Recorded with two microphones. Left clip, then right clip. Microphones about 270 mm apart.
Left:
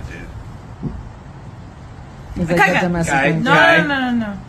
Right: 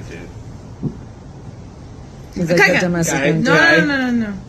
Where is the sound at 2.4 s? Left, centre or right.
Centre.